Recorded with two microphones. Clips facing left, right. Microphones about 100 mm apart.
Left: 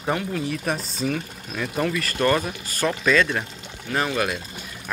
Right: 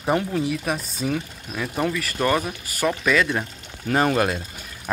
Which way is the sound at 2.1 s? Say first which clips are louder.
Left 2 dB; 15° right (ahead or behind).